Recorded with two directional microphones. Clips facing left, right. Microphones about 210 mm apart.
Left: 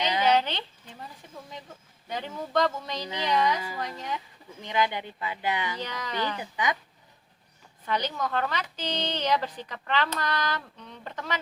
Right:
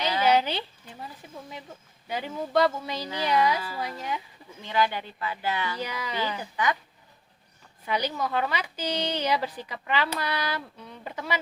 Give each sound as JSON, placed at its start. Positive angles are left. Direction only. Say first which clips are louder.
{"t": 0.3, "sound": "a sound", "louder": "right 2 dB", "side_deg": -10}
{"t": 1.2, "sound": "a woman's voice", "louder": "right 2 dB", "side_deg": -10}
{"t": 4.6, "sound": "speech", "louder": "right 1 dB", "side_deg": 15}
{"t": 5.8, "sound": "a woman's voice", "louder": "right 1 dB", "side_deg": -10}
{"t": 6.4, "sound": "speech", "louder": "right 2 dB", "side_deg": 15}
{"t": 7.9, "sound": "a woman's voice", "louder": "right 1 dB", "side_deg": -10}